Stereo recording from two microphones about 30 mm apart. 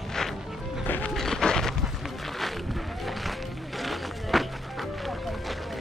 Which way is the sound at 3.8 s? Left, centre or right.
Centre.